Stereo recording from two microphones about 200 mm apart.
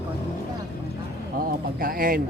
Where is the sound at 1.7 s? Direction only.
45° right (ahead or behind).